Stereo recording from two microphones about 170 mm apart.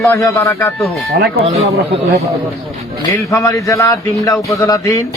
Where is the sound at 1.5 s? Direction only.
40° right (ahead or behind).